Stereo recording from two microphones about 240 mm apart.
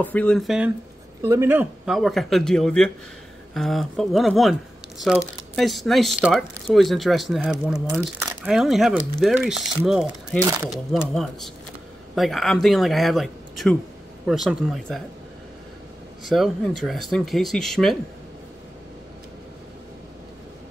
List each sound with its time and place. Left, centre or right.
0.0 s speech: centre
10.4 s speech: centre
10.7 s speech: centre
16.3 s speech: centre